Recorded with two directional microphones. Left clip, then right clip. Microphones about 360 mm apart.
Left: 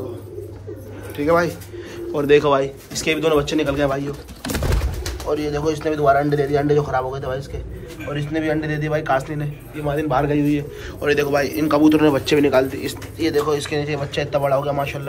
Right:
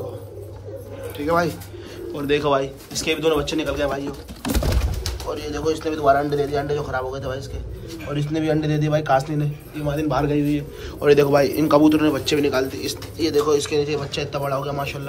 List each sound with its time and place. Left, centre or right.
1.1 s speech: centre
5.3 s a man's voice: centre
11.9 s a man's voice: centre